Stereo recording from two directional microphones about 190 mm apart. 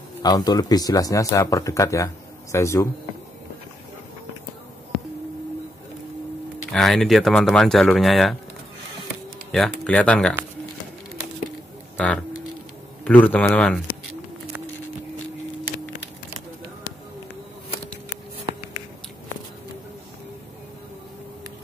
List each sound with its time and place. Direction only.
0.2 s speech: 20° left (ahead or behind)
6.7 s speech: centre (ahead or behind)
9.5 s speech: 5° left (ahead or behind)
12.0 s speech: 5° left (ahead or behind)